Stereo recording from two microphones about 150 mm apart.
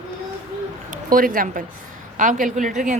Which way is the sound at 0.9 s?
65° right (ahead or behind).